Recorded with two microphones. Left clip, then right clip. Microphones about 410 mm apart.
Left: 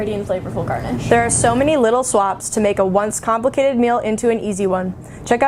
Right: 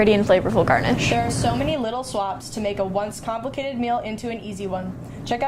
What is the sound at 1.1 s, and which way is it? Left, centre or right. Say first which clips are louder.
A woman's voice: left 8 dB; left.